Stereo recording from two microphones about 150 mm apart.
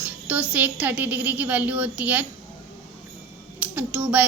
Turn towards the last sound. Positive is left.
turn(degrees=-10)  # may be behind; listen again after turning